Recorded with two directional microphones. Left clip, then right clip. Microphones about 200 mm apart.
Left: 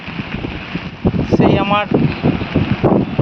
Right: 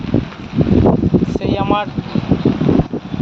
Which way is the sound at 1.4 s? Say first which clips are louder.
Left 6 dB; 5° right (ahead or behind).